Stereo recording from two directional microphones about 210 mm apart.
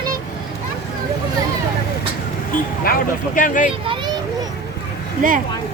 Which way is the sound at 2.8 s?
40° left (ahead or behind).